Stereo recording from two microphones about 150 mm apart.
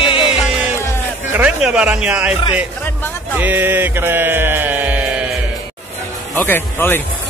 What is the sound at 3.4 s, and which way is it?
Mantra, 10° right (ahead or behind).